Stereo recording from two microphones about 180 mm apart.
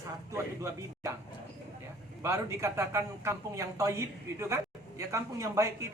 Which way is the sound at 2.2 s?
15° right (ahead or behind).